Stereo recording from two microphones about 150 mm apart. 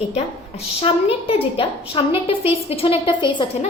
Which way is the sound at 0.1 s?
45° left (ahead or behind).